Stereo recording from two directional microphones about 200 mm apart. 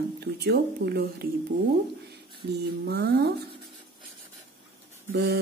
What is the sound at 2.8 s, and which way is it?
Speech, 55° right (ahead or behind).